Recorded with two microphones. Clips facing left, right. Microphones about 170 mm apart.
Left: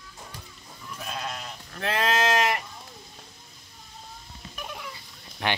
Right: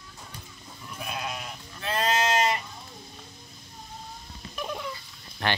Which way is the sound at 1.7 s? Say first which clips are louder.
Left 2 dB; 70° left (ahead or behind).